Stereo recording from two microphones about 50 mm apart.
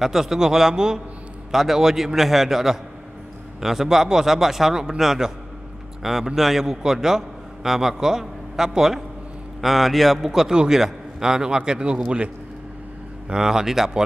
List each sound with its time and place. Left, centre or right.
0.0 s a man's voice: centre
10.5 s a man's voice: centre
13.3 s a man's voice: centre